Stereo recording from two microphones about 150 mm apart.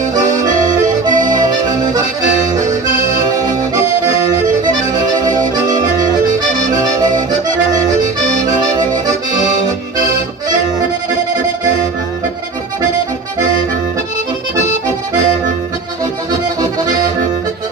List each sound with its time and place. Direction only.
0.3 s accordion: 55° right (ahead or behind)
1.6 s accordion: 30° right (ahead or behind)
2.4 s accordion: 55° right (ahead or behind)
4.9 s accordion: 25° right (ahead or behind)
5.7 s accordion: 60° right (ahead or behind)
6.7 s accordion: 25° right (ahead or behind)
8.2 s accordion: 55° right (ahead or behind)
8.4 s accordion: 25° right (ahead or behind)